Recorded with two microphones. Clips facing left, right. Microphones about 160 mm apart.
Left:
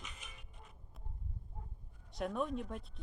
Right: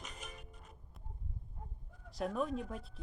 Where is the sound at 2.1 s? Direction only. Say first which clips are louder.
Right 1 dB; centre (ahead or behind).